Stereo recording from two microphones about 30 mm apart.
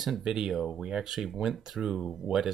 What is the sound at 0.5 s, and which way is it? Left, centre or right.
Speech, centre.